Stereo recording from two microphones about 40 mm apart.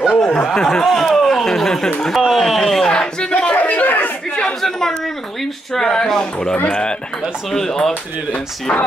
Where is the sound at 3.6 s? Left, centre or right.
Left.